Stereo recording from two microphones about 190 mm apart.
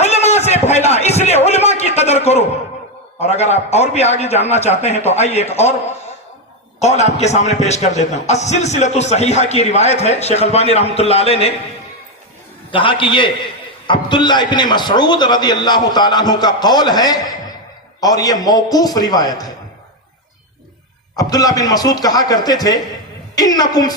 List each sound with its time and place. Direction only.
0.0 s a sound: 35° left (ahead or behind)
3.2 s a man's voice: 35° left (ahead or behind)
6.7 s a man's voice: 35° left (ahead or behind)
12.7 s a man's voice: 25° left (ahead or behind)
21.2 s a man's voice: 20° left (ahead or behind)